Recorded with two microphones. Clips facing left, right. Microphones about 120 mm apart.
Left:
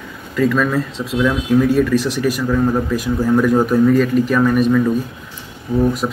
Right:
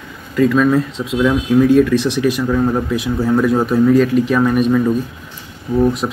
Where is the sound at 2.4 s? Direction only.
10° right (ahead or behind).